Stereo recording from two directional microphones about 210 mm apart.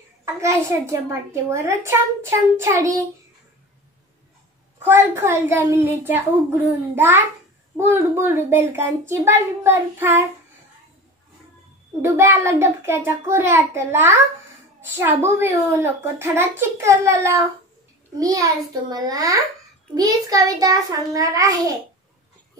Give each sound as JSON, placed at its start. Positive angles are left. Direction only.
{"t": 0.2, "sound": "a child's voice", "side_deg": -15}
{"t": 4.8, "sound": "a child's voice", "side_deg": -10}
{"t": 12.0, "sound": "a child's voice", "side_deg": -10}